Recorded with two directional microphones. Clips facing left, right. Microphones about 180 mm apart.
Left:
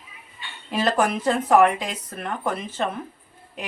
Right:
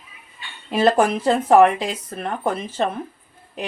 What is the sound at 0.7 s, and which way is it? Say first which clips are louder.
Speech: right 5 dB; 30° right (ahead or behind).